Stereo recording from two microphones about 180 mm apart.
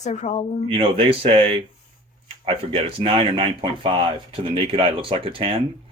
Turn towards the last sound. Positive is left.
turn(degrees=-30)  # may be behind; listen again after turning